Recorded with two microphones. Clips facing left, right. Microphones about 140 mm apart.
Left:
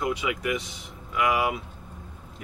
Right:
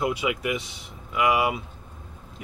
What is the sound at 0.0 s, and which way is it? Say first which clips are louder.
Speech: right 2 dB; 10° right (ahead or behind).